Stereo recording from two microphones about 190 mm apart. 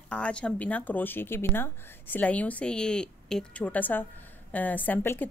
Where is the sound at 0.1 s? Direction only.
5° left (ahead or behind).